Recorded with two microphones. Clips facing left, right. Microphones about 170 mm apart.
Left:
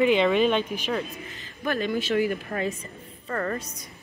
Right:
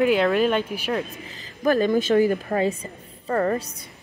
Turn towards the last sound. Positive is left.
turn(degrees=-25)  # may be behind; listen again after turning